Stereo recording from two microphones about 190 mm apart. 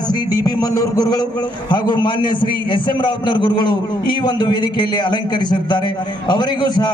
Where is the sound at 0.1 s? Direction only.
20° left (ahead or behind).